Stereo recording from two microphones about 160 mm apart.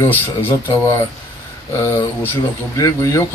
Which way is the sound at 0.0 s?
15° left (ahead or behind).